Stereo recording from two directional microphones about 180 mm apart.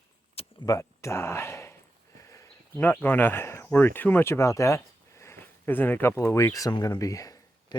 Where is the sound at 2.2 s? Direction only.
15° left (ahead or behind).